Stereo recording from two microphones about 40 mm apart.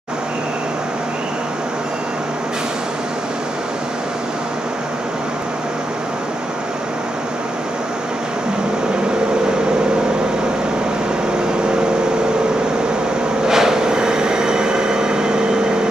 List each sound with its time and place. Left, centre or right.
13.5 s vehicle: centre